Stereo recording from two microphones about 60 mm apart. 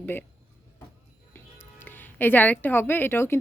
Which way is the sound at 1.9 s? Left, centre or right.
Left.